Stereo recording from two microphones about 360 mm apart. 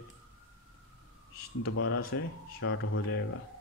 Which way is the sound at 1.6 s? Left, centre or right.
Left.